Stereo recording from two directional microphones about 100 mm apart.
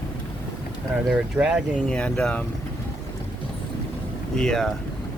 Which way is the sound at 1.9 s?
10° left (ahead or behind).